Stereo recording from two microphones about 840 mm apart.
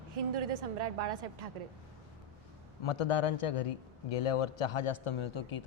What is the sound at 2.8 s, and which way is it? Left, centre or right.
A man's voice, left.